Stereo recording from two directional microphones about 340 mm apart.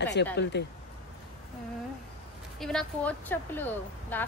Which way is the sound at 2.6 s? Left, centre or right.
Centre.